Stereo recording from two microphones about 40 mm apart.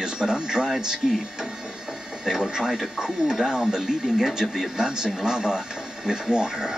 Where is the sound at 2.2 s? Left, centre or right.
Centre.